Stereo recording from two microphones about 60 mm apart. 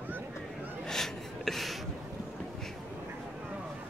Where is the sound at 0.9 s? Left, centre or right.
Centre.